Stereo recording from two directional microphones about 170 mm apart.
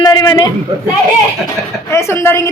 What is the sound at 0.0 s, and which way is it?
Speech, 25° left (ahead or behind).